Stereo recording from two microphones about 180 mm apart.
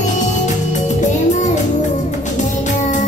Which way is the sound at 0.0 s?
40° left (ahead or behind).